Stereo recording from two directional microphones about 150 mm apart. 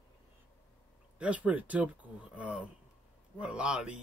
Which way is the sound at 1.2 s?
10° right (ahead or behind).